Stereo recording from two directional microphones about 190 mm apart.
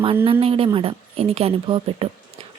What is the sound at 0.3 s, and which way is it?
Speech, 30° right (ahead or behind).